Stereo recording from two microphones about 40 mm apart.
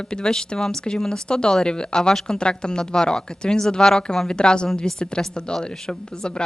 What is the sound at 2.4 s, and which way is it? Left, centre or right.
A woman's voice, left.